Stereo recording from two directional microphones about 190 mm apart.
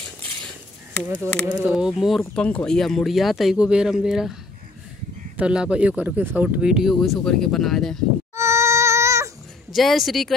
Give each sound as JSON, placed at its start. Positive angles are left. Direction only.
{"t": 1.1, "sound": "speech", "side_deg": -15}
{"t": 1.6, "sound": "speech", "side_deg": -5}
{"t": 5.4, "sound": "speech", "side_deg": -5}
{"t": 8.4, "sound": "baby cry", "side_deg": -15}
{"t": 9.7, "sound": "speech", "side_deg": 0}